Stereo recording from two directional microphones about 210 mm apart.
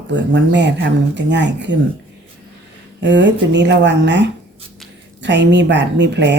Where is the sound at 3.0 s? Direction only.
55° right (ahead or behind).